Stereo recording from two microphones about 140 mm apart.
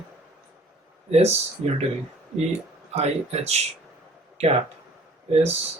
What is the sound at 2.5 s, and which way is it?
Speech, 50° right (ahead or behind).